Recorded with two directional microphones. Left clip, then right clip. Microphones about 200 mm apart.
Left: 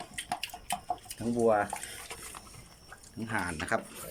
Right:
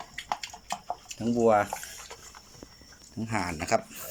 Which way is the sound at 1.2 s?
Centre (ahead or behind).